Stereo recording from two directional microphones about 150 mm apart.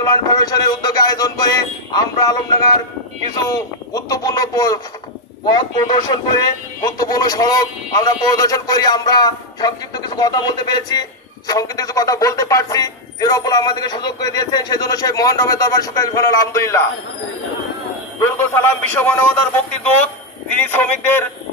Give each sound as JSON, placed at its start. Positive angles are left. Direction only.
{"t": 0.0, "sound": "music", "side_deg": 25}
{"t": 3.4, "sound": "a man's voice", "side_deg": 25}
{"t": 18.2, "sound": "a man's voice", "side_deg": 15}